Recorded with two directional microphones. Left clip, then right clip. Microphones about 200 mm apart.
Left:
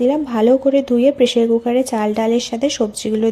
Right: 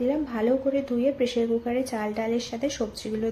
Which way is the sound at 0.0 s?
40° left (ahead or behind).